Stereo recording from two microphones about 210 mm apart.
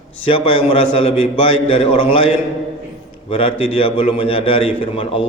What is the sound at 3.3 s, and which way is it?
A man's voice, 25° left (ahead or behind).